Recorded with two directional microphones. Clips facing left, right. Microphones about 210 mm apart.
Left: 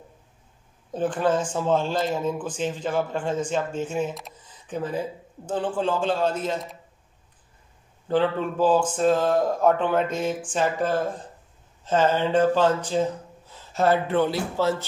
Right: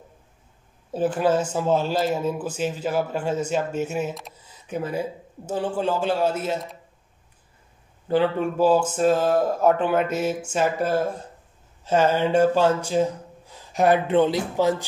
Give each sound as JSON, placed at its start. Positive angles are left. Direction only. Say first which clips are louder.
{"t": 0.9, "sound": "speech", "louder": "right 2 dB", "side_deg": -5}
{"t": 8.1, "sound": "speech", "louder": "right 2 dB", "side_deg": -10}